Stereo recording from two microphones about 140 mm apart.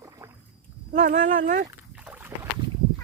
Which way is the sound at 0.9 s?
60° right (ahead or behind).